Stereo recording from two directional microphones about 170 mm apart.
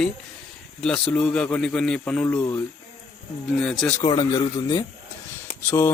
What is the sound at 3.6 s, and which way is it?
Speech, 5° left (ahead or behind).